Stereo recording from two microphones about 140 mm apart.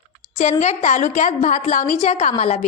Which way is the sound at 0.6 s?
55° left (ahead or behind).